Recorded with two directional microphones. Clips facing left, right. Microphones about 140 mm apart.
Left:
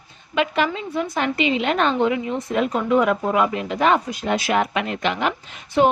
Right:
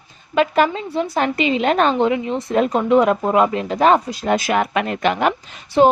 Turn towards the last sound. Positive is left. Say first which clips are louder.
# right 4 dB
turn(degrees=-35)  # may be behind; listen again after turning